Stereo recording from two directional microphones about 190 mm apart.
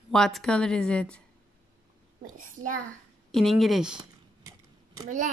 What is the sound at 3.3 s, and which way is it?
Speech, centre (ahead or behind).